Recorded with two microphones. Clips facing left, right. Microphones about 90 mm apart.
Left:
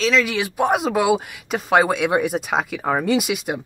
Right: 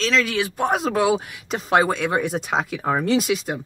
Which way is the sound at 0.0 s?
5° left (ahead or behind).